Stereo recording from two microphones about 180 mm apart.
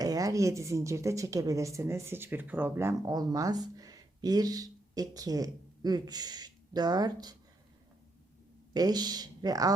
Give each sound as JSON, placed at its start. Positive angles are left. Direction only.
{"t": 0.0, "sound": "a woman's voice", "side_deg": -20}
{"t": 8.7, "sound": "speech", "side_deg": -20}